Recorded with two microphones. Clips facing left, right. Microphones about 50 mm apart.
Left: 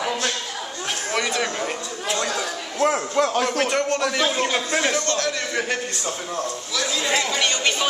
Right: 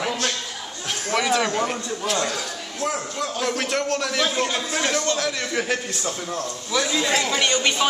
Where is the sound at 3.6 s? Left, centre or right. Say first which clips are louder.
Left 3 dB; centre.